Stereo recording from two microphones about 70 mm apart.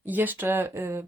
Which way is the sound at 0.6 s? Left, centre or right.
Right.